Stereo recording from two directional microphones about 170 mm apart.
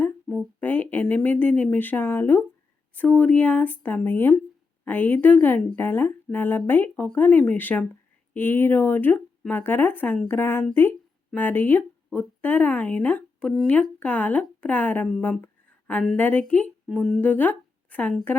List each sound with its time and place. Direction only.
0.0 s speech: 5° left (ahead or behind)